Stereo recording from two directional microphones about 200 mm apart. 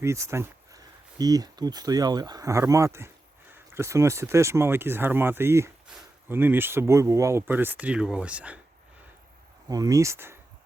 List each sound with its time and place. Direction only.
0.0 s speech: 15° right (ahead or behind)
9.6 s speech: 20° right (ahead or behind)